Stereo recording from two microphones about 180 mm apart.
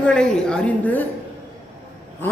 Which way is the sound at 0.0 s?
5° left (ahead or behind).